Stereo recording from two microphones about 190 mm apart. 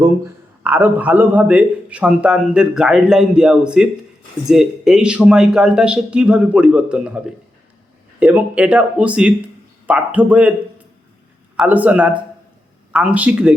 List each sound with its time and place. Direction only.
0.6 s a man's voice: 10° right (ahead or behind)
11.5 s a man's voice: 10° right (ahead or behind)